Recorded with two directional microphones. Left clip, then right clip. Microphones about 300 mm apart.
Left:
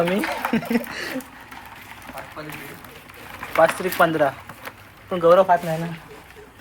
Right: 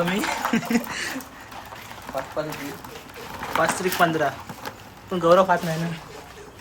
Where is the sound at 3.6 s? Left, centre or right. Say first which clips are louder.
Left 4 dB; centre.